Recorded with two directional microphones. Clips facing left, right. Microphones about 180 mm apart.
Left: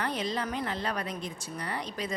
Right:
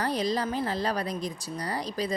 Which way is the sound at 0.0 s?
35° right (ahead or behind).